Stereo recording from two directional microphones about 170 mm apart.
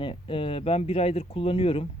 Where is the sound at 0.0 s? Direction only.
30° left (ahead or behind).